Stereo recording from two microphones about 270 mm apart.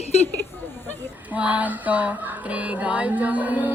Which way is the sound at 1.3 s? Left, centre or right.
Centre.